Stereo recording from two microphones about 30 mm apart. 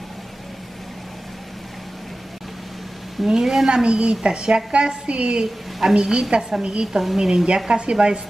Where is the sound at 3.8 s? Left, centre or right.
Right.